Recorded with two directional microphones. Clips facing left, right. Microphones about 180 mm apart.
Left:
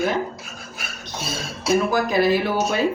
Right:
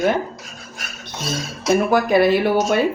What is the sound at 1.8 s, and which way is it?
Speech, 60° right (ahead or behind).